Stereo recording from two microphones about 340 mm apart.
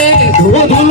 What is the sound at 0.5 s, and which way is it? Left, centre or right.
Cowbell, centre.